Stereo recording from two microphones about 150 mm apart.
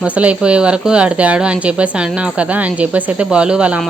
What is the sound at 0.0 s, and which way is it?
A woman's voice, 10° right (ahead or behind).